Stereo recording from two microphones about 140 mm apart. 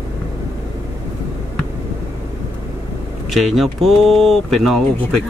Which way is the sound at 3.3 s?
Centre (ahead or behind).